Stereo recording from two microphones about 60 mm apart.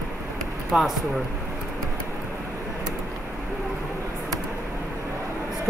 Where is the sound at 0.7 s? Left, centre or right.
Centre.